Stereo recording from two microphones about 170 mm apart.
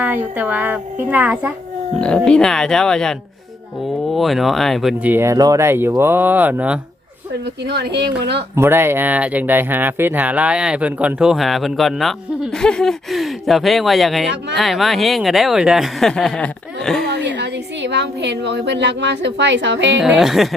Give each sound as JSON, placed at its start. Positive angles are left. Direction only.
{"t": 0.0, "sound": "speech", "side_deg": -10}
{"t": 2.0, "sound": "speech", "side_deg": 5}
{"t": 5.1, "sound": "speech", "side_deg": -15}
{"t": 7.6, "sound": "speech", "side_deg": -80}
{"t": 8.5, "sound": "speech", "side_deg": -15}
{"t": 17.1, "sound": "a woman's voice", "side_deg": -90}
{"t": 20.0, "sound": "speech", "side_deg": 0}